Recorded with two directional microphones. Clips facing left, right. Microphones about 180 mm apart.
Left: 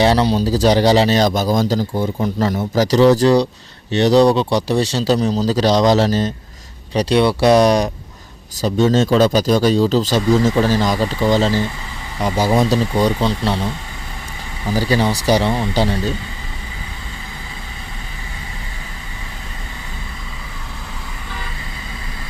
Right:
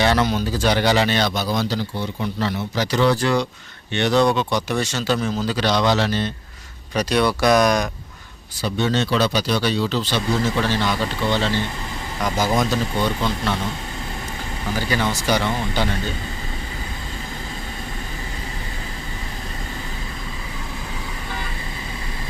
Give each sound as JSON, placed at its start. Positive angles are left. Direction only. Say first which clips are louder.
{"t": 0.0, "sound": "a man's voice", "louder": "left 5 dB", "side_deg": 35}
{"t": 14.8, "sound": "a man's voice", "louder": "left 6 dB", "side_deg": 35}